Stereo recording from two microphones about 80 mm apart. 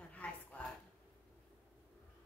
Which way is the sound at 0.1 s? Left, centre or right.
Centre.